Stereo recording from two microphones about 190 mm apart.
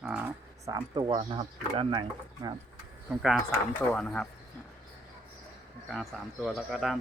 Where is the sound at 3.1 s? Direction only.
Centre (ahead or behind).